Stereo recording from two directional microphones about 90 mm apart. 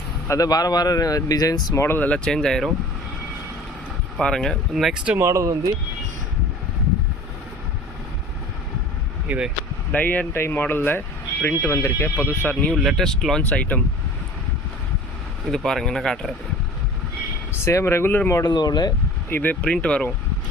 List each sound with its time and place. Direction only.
0.3 s speech: 40° left (ahead or behind)
1.7 s speech: 30° left (ahead or behind)
2.0 s speech: 15° left (ahead or behind)
4.2 s speech: 5° left (ahead or behind)
4.7 s speech: 5° right (ahead or behind)
5.1 s speech: 35° right (ahead or behind)
9.2 s speech: 15° right (ahead or behind)
9.9 s speech: 20° left (ahead or behind)
12.7 s speech: 5° right (ahead or behind)
13.4 s speech: 15° left (ahead or behind)
15.4 s speech: 5° left (ahead or behind)
17.5 s speech: 30° left (ahead or behind)
18.4 s speech: 50° left (ahead or behind)
19.3 s speech: 20° left (ahead or behind)